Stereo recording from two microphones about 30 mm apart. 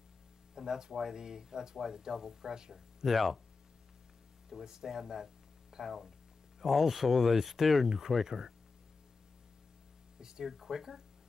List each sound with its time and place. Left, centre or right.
0.6 s speech: centre
3.1 s speech: centre
4.6 s speech: centre
10.1 s a sound: right
10.4 s speech: centre